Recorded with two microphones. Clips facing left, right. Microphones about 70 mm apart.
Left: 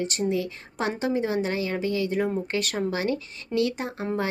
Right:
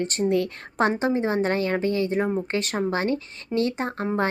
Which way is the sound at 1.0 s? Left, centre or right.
Right.